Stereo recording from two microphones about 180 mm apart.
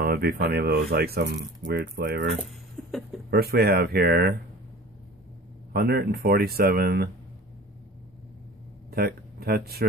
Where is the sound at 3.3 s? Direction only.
60° right (ahead or behind).